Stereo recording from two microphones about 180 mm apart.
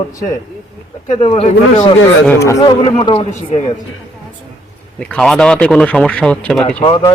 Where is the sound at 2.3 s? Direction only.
15° left (ahead or behind).